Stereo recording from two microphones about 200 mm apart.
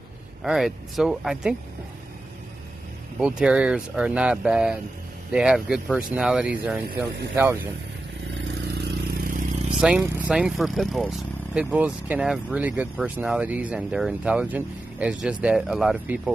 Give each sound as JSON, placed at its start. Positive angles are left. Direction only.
{"t": 0.4, "sound": "speech", "side_deg": 0}
{"t": 3.2, "sound": "speech", "side_deg": -5}
{"t": 8.6, "sound": "vehicle", "side_deg": -50}
{"t": 9.8, "sound": "speech", "side_deg": -5}